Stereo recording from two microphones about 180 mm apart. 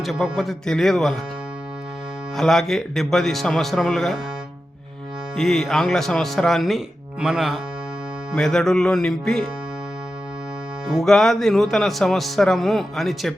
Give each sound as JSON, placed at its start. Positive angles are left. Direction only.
{"t": 0.0, "sound": "speech", "side_deg": 0}
{"t": 2.3, "sound": "speech", "side_deg": 0}
{"t": 5.4, "sound": "speech", "side_deg": 0}
{"t": 10.8, "sound": "speech", "side_deg": 0}